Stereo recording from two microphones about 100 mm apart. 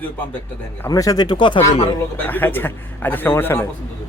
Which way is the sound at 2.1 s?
20° left (ahead or behind).